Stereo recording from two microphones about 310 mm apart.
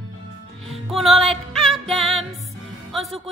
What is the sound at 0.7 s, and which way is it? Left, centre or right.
Music, centre.